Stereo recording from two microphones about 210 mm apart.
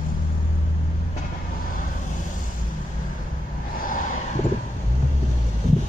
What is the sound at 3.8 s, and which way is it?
Vehicle, 40° left (ahead or behind).